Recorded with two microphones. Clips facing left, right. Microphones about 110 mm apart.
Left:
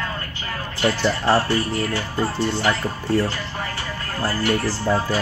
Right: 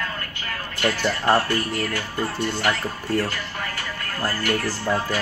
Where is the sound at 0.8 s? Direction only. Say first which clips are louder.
Left 2 dB; 25° left (ahead or behind).